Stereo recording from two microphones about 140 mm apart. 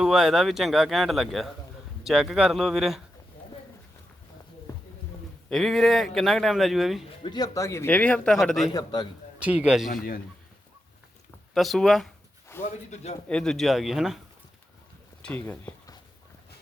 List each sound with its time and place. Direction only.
0.0 s speech: 5° right (ahead or behind)
4.7 s a sound: 25° left (ahead or behind)
5.5 s speech: centre (ahead or behind)
7.0 s speech: 45° left (ahead or behind)
7.3 s speech: 25° left (ahead or behind); by 8.7 s centre (ahead or behind)
8.7 s a man's voice: 30° left (ahead or behind)
9.4 s a man's voice: 10° right (ahead or behind)
9.9 s a man's voice: 90° left
11.5 s speech: centre (ahead or behind)
12.5 s a sound: 15° left (ahead or behind)
12.9 s a man's voice: 50° left (ahead or behind)
13.2 s speech: 5° left (ahead or behind)